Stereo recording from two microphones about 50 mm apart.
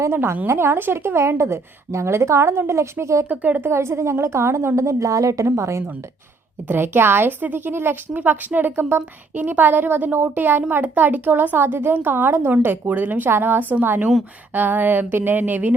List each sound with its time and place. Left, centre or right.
0.1 s a woman's voice: right
3.2 s speech: right
3.7 s a woman's voice: right
6.7 s a woman's voice: right
9.0 s speech: right